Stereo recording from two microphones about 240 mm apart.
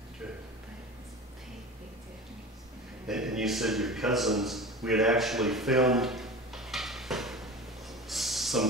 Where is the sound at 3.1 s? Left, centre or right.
Centre.